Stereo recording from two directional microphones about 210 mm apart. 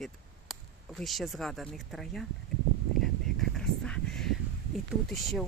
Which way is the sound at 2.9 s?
Centre (ahead or behind).